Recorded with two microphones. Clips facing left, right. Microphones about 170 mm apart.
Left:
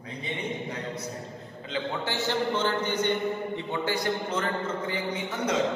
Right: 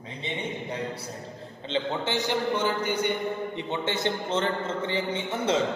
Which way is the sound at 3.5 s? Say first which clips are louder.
Even; 20° right (ahead or behind).